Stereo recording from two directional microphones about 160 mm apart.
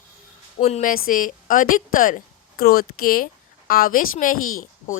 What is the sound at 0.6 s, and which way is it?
Speech, 45° left (ahead or behind).